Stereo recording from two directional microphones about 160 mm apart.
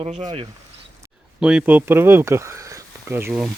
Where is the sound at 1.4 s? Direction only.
5° right (ahead or behind).